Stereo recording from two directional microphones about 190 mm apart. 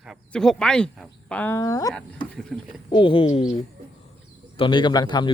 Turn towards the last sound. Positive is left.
turn(degrees=25)  # may be behind; listen again after turning